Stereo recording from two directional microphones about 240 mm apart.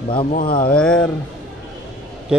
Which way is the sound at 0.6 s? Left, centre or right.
Centre.